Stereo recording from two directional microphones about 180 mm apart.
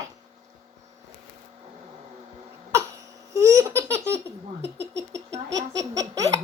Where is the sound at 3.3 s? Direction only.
15° right (ahead or behind).